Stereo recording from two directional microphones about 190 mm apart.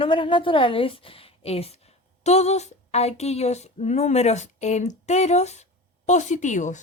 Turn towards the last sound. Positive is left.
turn(degrees=40)  # may be behind; listen again after turning